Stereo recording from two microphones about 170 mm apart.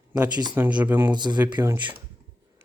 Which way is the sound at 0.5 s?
10° right (ahead or behind).